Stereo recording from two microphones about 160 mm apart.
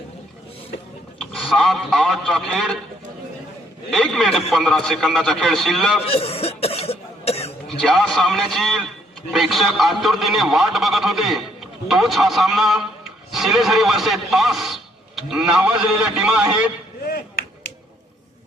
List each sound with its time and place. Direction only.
1.2 s a man's voice: centre (ahead or behind)
3.9 s a man's voice: centre (ahead or behind)
6.1 s cough: 40° left (ahead or behind)
7.8 s a man's voice: 5° left (ahead or behind)